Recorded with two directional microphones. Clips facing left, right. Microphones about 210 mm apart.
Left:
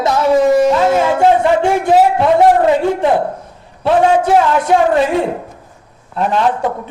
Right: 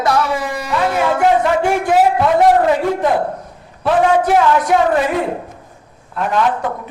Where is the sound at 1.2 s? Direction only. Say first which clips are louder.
Left 1 dB; 25° left (ahead or behind).